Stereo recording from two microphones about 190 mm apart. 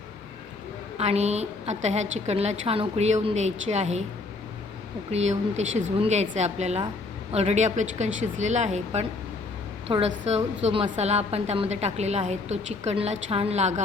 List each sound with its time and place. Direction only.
0.9 s a woman's voice: 35° right (ahead or behind)
5.1 s a woman's voice: 35° right (ahead or behind)
9.9 s a woman's voice: 20° right (ahead or behind)
10.2 s a woman's voice: 35° right (ahead or behind)